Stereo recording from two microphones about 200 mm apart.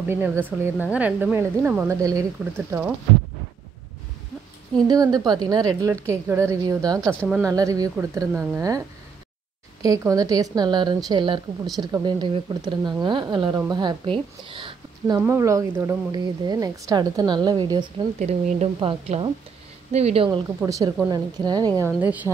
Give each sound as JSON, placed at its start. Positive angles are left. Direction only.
{"t": 0.1, "sound": "a woman's voice", "side_deg": -10}
{"t": 4.8, "sound": "speech", "side_deg": -20}
{"t": 7.2, "sound": "a woman's voice", "side_deg": 0}
{"t": 7.5, "sound": "a woman's voice", "side_deg": -15}
{"t": 15.1, "sound": "speech", "side_deg": -15}
{"t": 20.2, "sound": "a woman's voice", "side_deg": -15}
{"t": 22.0, "sound": "a woman's voice", "side_deg": -10}